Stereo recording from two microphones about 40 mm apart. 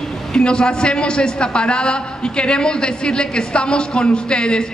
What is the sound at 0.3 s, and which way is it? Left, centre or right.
A man's voice, left.